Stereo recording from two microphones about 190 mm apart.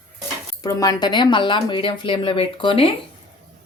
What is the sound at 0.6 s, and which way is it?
Speech, 20° left (ahead or behind).